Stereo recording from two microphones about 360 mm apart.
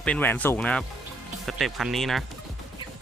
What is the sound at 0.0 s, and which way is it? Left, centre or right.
Speech, centre.